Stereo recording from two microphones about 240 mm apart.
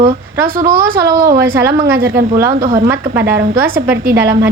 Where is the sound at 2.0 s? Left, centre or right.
Right.